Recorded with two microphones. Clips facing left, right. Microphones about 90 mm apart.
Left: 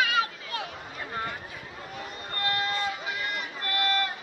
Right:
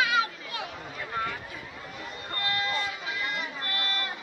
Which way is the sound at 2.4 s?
45° left (ahead or behind).